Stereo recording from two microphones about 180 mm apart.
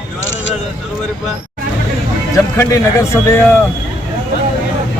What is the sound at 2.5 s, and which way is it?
A man's voice, 15° left (ahead or behind).